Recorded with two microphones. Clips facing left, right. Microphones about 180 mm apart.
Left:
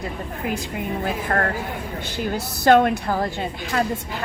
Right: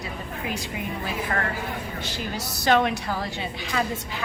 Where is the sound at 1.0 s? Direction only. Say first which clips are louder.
Left 5 dB; 55° left (ahead or behind).